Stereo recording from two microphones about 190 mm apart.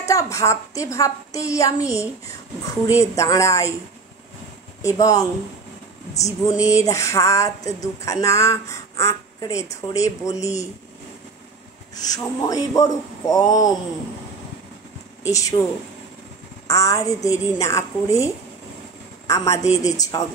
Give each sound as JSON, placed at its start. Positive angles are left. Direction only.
{"t": 0.0, "sound": "speech", "side_deg": 15}
{"t": 4.8, "sound": "speech", "side_deg": 20}
{"t": 11.9, "sound": "speech", "side_deg": 20}
{"t": 15.2, "sound": "speech", "side_deg": 15}
{"t": 16.6, "sound": "a woman's voice", "side_deg": 15}